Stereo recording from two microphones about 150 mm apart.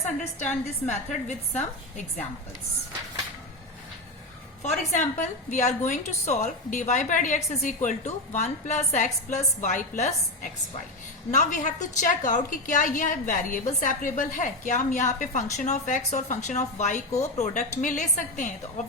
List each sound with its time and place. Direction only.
0.0 s a woman's voice: 55° left (ahead or behind)
4.6 s a woman's voice: 50° left (ahead or behind)